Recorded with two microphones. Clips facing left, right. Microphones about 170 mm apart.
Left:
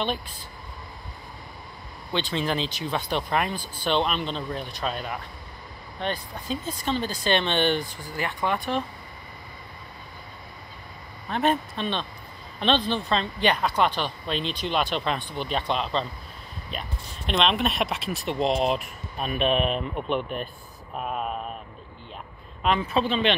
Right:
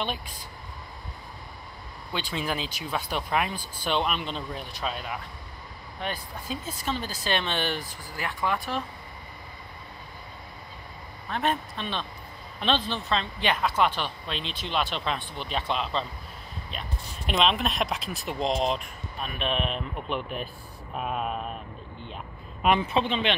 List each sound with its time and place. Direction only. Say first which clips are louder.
0.0 s speech: left 3 dB; 5° right (ahead or behind)
2.1 s speech: left 4 dB; 10° right (ahead or behind)
11.2 s speech: left 4 dB; centre (ahead or behind)
17.3 s speech: left 1 dB; centre (ahead or behind)
22.8 s speech: left 2 dB; 20° right (ahead or behind)